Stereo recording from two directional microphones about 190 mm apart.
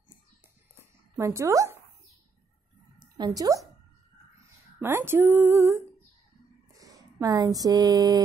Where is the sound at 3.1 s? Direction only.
20° right (ahead or behind).